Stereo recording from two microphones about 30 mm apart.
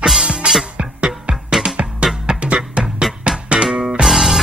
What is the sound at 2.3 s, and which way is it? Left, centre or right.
Music, right.